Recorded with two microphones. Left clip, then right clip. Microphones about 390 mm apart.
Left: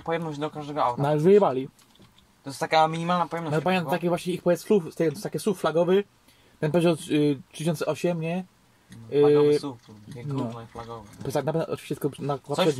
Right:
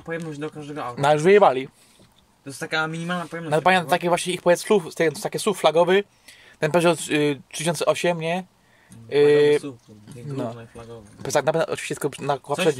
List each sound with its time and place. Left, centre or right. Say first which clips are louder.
0.1 s speech: left 2 dB; centre
1.0 s speech: right 6 dB; right
2.5 s speech: left 4 dB; centre
3.5 s speech: right 8 dB; right
11.3 s speech: right 6 dB; right